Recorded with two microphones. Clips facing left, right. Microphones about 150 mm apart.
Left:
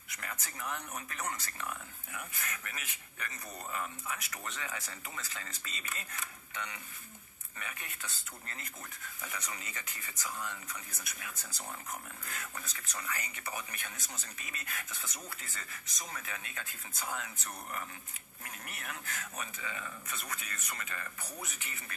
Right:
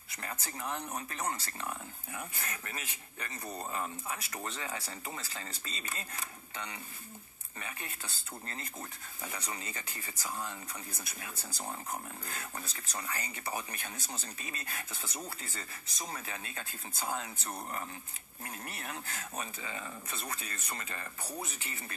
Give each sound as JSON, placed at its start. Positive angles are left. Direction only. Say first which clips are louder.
{"t": 0.1, "sound": "speech", "louder": "right 3 dB", "side_deg": -30}